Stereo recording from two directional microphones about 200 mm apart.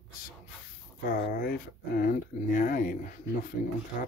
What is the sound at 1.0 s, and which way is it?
Speech, 45° left (ahead or behind).